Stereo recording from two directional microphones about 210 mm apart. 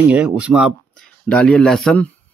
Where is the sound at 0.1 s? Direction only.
5° right (ahead or behind).